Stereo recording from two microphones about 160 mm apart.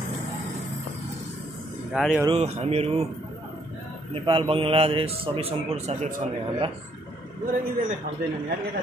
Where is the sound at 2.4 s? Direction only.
40° right (ahead or behind).